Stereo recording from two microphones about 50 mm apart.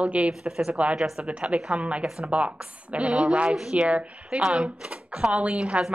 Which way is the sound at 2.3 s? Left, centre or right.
Right.